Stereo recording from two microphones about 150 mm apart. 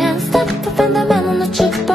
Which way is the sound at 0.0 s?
Centre (ahead or behind).